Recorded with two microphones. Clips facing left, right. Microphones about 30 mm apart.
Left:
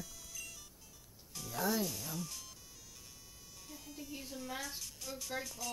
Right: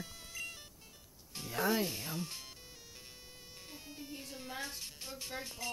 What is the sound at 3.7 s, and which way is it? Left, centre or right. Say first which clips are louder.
Music: left 1 dB; right.